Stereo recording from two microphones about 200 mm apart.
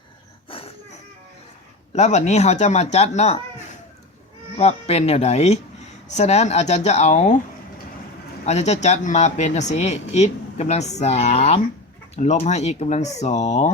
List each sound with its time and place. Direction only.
0.5 s a sound: 25° left (ahead or behind)
1.9 s speech: 35° left (ahead or behind)
8.4 s speech: 35° left (ahead or behind)